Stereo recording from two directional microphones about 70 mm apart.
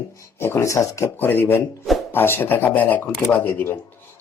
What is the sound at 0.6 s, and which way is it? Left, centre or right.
Speech, left.